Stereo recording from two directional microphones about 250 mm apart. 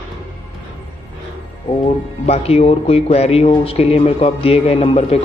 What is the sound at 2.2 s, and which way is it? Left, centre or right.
Speech, left.